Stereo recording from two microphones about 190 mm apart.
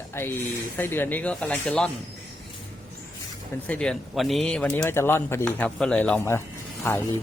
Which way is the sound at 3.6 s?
5° left (ahead or behind).